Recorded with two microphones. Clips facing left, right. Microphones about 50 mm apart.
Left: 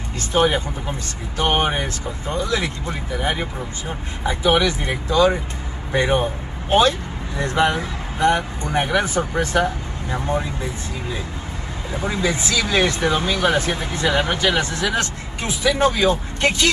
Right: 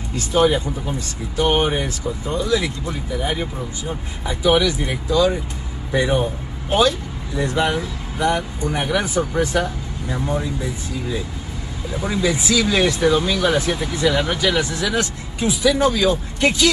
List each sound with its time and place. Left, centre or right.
0.3 s speech: left
2.3 s speech: left
4.3 s speech: left
12.0 s speech: left